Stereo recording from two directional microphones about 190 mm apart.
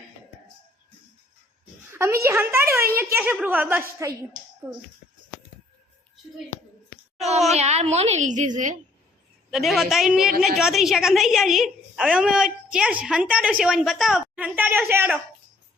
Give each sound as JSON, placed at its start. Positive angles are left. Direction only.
{"t": 1.9, "sound": "a woman's voice", "side_deg": -15}
{"t": 7.5, "sound": "a woman's voice", "side_deg": -35}
{"t": 9.5, "sound": "a woman's voice", "side_deg": 0}